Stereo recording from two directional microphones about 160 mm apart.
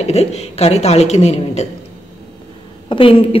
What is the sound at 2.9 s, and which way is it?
Speech, 35° left (ahead or behind).